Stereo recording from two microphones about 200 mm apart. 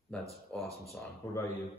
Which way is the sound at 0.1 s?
5° left (ahead or behind).